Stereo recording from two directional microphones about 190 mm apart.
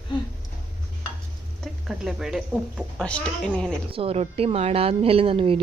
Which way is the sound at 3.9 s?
30° right (ahead or behind).